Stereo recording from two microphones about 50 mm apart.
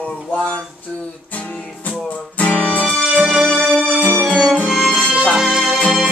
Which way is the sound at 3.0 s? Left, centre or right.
Centre.